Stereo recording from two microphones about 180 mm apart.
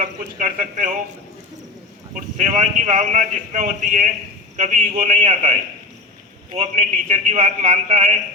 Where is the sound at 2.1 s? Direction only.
40° right (ahead or behind).